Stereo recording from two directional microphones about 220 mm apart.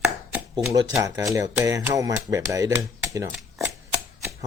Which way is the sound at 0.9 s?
15° right (ahead or behind).